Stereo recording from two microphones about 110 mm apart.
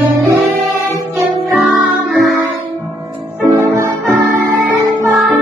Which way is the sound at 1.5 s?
Centre (ahead or behind).